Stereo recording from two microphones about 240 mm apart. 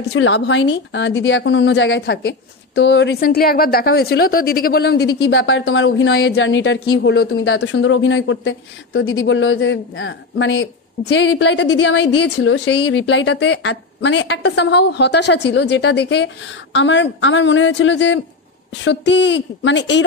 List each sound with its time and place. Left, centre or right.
0.1 s a woman's voice: left